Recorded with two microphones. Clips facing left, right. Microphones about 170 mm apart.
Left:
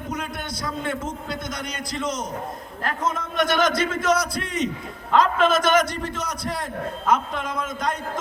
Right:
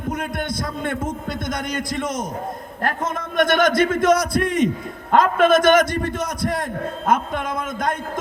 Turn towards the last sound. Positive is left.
turn(degrees=-50)  # may be behind; listen again after turning